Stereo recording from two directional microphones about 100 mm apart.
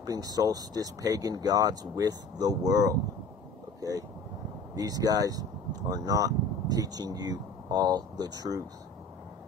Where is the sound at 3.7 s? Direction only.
35° right (ahead or behind).